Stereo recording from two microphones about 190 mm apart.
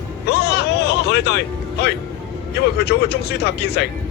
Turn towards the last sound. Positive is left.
turn(degrees=60)  # may be behind; listen again after turning